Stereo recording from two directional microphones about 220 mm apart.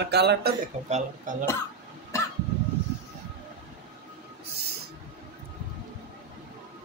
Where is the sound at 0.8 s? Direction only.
35° right (ahead or behind).